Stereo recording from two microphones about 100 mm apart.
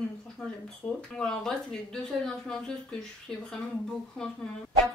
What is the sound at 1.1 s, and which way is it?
Speech, 5° left (ahead or behind).